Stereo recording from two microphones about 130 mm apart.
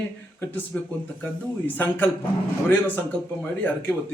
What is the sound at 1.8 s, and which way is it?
A man's voice, 15° left (ahead or behind).